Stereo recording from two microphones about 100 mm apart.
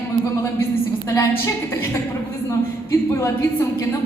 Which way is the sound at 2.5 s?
30° left (ahead or behind).